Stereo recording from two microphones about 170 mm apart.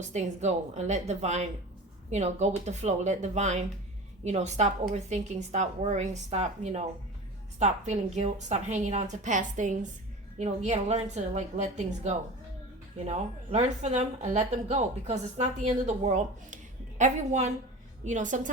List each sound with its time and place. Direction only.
0.0 s a woman's voice: 45° right (ahead or behind)